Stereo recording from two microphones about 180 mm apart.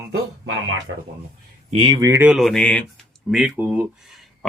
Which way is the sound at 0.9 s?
75° right (ahead or behind).